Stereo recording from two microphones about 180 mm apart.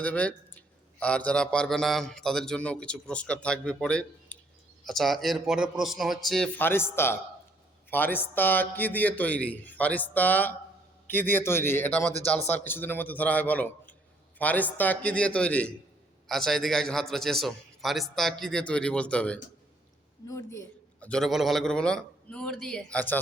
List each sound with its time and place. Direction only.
0.0 s a man's voice: 10° left (ahead or behind)
6.6 s a man's voice: 10° left (ahead or behind)
20.2 s a man's voice: 15° left (ahead or behind)
21.1 s a man's voice: centre (ahead or behind)